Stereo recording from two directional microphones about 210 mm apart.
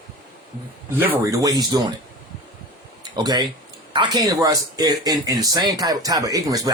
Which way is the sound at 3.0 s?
20° right (ahead or behind).